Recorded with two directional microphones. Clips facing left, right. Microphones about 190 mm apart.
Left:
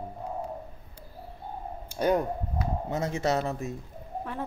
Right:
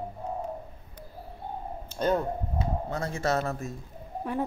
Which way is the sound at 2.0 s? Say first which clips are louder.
Left 1 dB; 10° left (ahead or behind).